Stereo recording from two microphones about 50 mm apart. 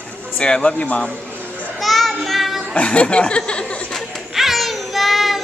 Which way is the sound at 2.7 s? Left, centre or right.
Left.